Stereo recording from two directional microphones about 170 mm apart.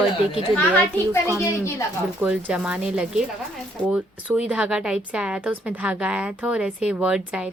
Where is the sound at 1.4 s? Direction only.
15° left (ahead or behind).